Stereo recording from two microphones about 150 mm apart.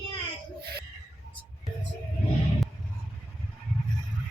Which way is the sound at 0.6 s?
90° right.